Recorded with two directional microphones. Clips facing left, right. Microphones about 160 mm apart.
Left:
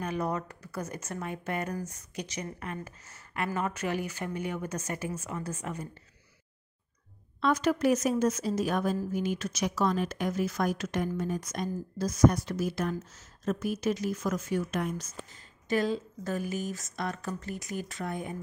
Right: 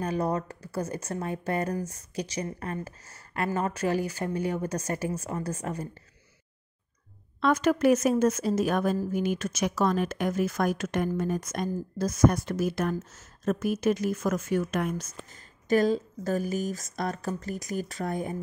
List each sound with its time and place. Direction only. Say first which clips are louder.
0.0 s speech: right 4 dB; 35° right (ahead or behind)
7.3 s speech: right 3 dB; 55° right (ahead or behind); by 18.3 s 40° right (ahead or behind)